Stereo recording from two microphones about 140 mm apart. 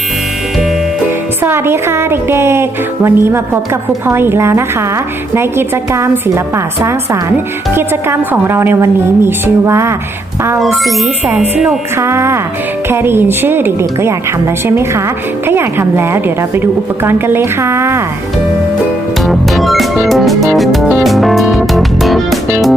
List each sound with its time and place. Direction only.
1.4 s speech: 15° right (ahead or behind)
7.7 s speech: 15° right (ahead or behind)
10.6 s speech: centre (ahead or behind)
11.9 s speech: 20° right (ahead or behind)
15.4 s speech: 15° right (ahead or behind)
19.2 s music: centre (ahead or behind)